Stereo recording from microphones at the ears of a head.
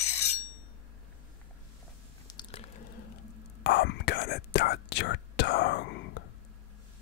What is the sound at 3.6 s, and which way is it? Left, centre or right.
Whispering, left.